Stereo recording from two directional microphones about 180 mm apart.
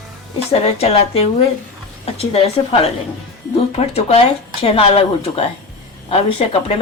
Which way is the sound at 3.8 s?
35° left (ahead or behind).